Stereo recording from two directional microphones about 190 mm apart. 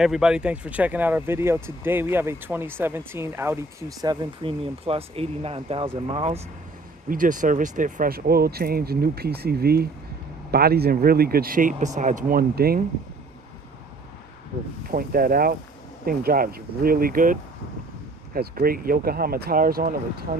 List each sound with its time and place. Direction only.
0.0 s speech: 5° right (ahead or behind); by 6.4 s 30° right (ahead or behind)
7.1 s speech: 45° right (ahead or behind)
14.8 s speech: 50° right (ahead or behind)
18.3 s speech: 50° right (ahead or behind)